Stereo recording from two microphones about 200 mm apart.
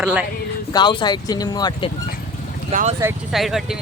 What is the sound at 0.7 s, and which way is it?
Speech, 20° left (ahead or behind).